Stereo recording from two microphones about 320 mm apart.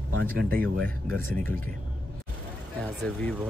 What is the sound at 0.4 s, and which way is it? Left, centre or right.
Speech, right.